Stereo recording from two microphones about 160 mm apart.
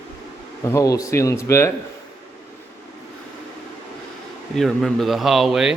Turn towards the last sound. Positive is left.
turn(degrees=0)  # may be behind; listen again after turning